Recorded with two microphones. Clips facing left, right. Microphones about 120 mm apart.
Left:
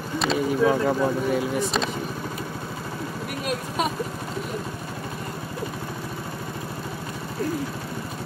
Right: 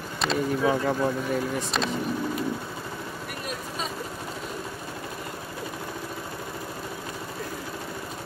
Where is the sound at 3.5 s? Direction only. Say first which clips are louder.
Left 8 dB; 70° left (ahead or behind).